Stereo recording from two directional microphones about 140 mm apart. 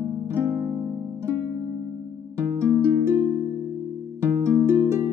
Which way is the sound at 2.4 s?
20° right (ahead or behind).